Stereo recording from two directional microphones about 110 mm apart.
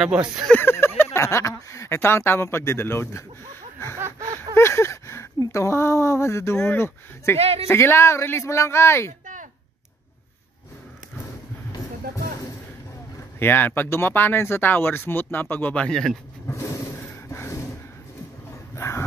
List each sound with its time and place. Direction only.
0.5 s speech: 20° left (ahead or behind)
4.6 s speech: 25° left (ahead or behind)
7.3 s speech: 65° right (ahead or behind)
7.6 s speech: 20° left (ahead or behind)
13.4 s speech: 15° left (ahead or behind)
16.4 s a sound: 25° left (ahead or behind)
18.8 s dog: 25° left (ahead or behind)